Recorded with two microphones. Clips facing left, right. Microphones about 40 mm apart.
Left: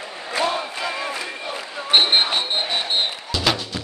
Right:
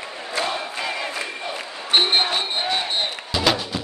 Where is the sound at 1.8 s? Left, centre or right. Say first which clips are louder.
Left 2 dB; centre.